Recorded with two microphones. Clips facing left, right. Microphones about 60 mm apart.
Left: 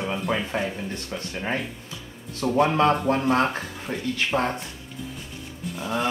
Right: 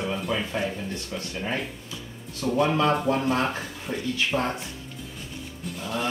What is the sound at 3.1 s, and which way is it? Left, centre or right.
Speech, left.